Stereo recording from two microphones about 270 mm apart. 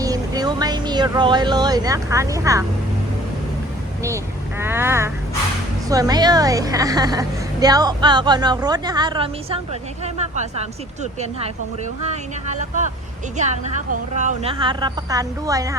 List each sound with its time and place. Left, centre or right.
0.0 s speech: centre
4.6 s a woman's voice: centre